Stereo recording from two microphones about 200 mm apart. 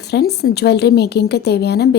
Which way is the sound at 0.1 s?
55° left (ahead or behind).